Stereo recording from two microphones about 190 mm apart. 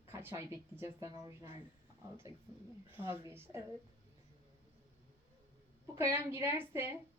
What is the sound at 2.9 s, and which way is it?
Speech, 10° right (ahead or behind).